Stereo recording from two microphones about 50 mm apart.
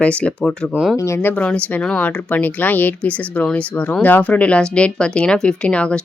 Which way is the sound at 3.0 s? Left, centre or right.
Left.